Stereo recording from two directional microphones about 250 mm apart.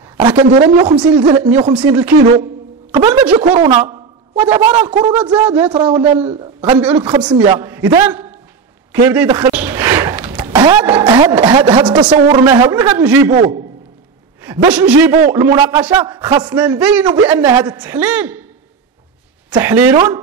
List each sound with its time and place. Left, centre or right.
0.7 s a man's voice: centre
13.3 s a man's voice: right
14.4 s a man's voice: centre
19.5 s a man's voice: centre